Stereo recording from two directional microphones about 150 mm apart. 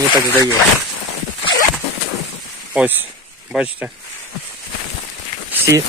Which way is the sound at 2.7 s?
10° right (ahead or behind).